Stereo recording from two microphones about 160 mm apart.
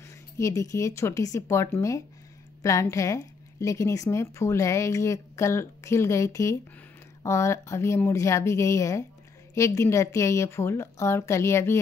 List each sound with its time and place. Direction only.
0.4 s a woman's voice: 20° left (ahead or behind)